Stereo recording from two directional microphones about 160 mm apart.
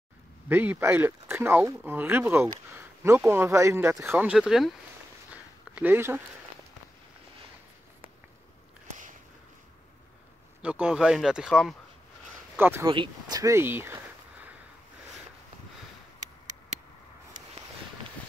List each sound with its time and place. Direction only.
0.5 s speech: 10° right (ahead or behind)
5.3 s a sound: 10° right (ahead or behind)
10.6 s speech: 5° right (ahead or behind)
12.5 s speech: 15° right (ahead or behind)
12.8 s speech: 30° right (ahead or behind); by 14.5 s 15° right (ahead or behind)